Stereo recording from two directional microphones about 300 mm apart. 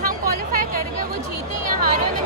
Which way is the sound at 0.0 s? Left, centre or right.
Right.